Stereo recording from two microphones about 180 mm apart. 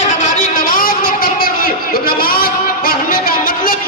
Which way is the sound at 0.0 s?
40° left (ahead or behind).